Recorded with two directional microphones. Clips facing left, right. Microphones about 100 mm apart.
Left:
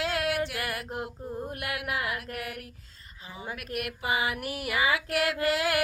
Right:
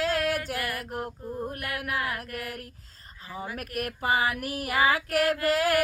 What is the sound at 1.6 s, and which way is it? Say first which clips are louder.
Female singing: left 2 dB; 40° right (ahead or behind).